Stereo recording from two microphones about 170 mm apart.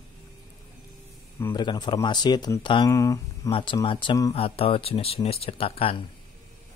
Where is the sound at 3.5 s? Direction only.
30° left (ahead or behind).